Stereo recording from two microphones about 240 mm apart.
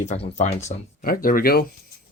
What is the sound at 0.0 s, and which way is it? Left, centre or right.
Speech, left.